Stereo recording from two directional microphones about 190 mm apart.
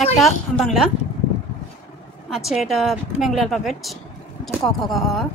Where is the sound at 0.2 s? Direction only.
Centre (ahead or behind).